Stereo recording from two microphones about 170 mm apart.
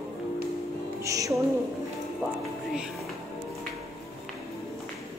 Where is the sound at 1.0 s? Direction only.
20° right (ahead or behind).